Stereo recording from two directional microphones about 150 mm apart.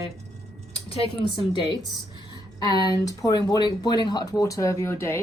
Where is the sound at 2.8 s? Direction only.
25° left (ahead or behind).